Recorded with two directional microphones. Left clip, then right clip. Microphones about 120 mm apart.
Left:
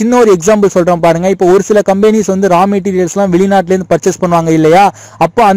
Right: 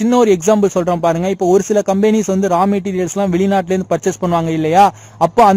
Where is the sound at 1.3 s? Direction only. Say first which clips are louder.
Left 5 dB; centre (ahead or behind).